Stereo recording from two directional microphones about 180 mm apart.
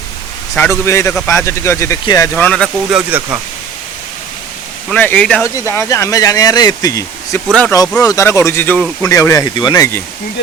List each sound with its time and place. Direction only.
0.5 s speech: 15° left (ahead or behind)
3.1 s speech: 10° right (ahead or behind)
4.9 s speech: 10° left (ahead or behind)